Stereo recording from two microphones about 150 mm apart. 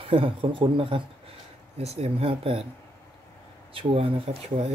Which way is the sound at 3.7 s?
35° right (ahead or behind).